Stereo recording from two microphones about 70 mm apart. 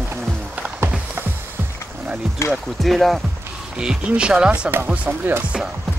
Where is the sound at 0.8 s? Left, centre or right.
Right.